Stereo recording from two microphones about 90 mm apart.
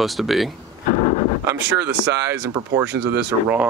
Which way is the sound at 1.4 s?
30° right (ahead or behind).